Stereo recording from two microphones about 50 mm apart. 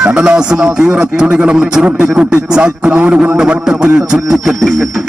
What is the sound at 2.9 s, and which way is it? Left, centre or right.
Speech, right.